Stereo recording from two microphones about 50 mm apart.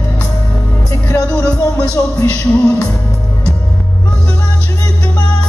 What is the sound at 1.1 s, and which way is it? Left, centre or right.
Music, left.